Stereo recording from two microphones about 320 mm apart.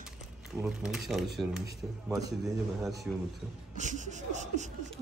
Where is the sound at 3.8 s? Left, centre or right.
Right.